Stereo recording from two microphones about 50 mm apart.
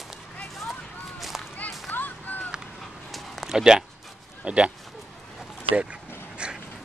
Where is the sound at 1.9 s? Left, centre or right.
Left.